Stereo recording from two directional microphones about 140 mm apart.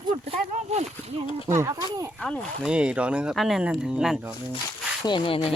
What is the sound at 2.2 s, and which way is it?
Speech, 5° left (ahead or behind).